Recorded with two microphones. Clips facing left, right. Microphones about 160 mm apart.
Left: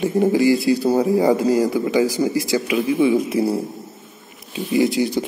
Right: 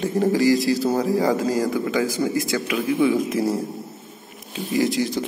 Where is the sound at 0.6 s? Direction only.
15° left (ahead or behind).